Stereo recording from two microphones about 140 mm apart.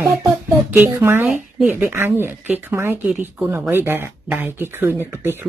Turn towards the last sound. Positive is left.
turn(degrees=-15)  # may be behind; listen again after turning